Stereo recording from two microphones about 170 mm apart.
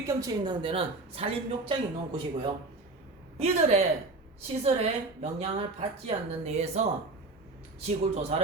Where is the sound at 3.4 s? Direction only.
40° right (ahead or behind).